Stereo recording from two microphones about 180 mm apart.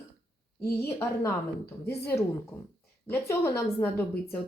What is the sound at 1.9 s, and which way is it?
Speech, 65° left (ahead or behind).